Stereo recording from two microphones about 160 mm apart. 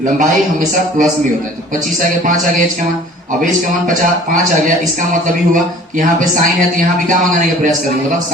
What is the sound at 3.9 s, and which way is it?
Speech, 55° right (ahead or behind).